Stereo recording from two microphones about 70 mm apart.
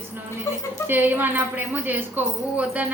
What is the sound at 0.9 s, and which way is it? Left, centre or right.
A woman's voice, right.